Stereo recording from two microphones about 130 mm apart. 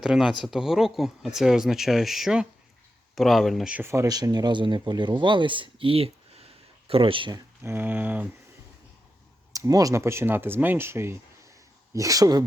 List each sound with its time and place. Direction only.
0.0 s speech: 5° right (ahead or behind); by 7.4 s 35° right (ahead or behind)
7.6 s a sound: 15° right (ahead or behind)
9.5 s speech: 25° right (ahead or behind)